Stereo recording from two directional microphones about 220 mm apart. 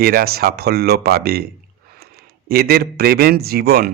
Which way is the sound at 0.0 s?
40° right (ahead or behind).